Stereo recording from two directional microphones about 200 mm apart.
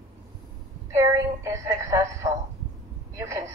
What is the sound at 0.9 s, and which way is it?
Speech, 15° right (ahead or behind).